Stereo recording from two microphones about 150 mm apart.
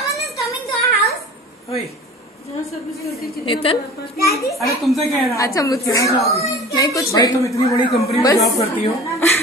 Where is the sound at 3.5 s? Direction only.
35° left (ahead or behind).